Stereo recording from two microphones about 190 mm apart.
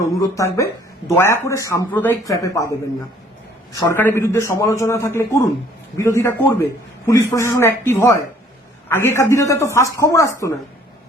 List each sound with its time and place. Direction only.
0.0 s speech: 20° left (ahead or behind)